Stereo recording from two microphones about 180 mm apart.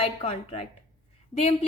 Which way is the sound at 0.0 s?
30° left (ahead or behind).